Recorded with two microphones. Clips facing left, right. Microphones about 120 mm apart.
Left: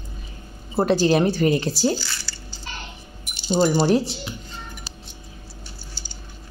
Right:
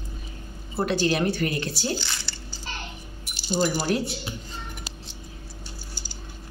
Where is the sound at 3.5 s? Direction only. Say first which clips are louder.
Left 6 dB; 30° left (ahead or behind).